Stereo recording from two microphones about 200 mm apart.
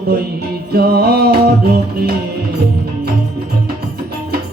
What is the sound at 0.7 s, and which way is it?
Music, 50° right (ahead or behind).